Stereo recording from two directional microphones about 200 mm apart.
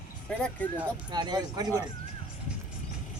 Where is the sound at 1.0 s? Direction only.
20° right (ahead or behind).